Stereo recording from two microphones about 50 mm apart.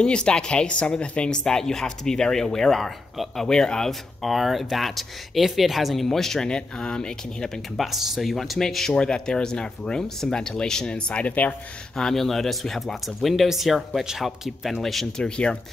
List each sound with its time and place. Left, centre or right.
0.0 s speech: centre
1.4 s speech: centre
4.2 s speech: centre
7.7 s speech: centre; by 11.5 s left
12.0 s speech: centre
15.2 s speech: centre